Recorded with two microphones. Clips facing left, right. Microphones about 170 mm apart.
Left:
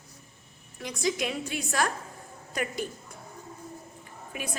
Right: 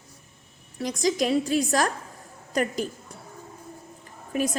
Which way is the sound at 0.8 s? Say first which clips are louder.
Right 5 dB; 40° right (ahead or behind).